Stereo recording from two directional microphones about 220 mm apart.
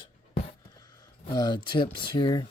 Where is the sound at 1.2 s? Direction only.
20° left (ahead or behind).